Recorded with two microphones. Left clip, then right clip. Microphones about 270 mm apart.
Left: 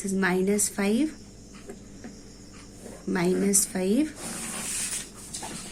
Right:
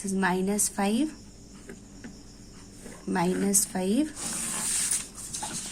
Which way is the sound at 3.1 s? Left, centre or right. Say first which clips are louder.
Left 2 dB; centre.